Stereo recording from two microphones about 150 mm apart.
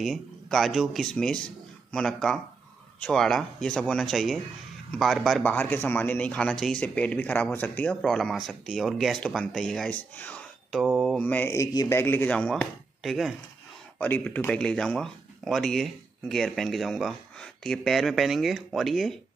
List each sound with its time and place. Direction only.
0.0 s speech: centre (ahead or behind)
5.5 s speech: 10° left (ahead or behind)
12.0 s speech: 15° left (ahead or behind)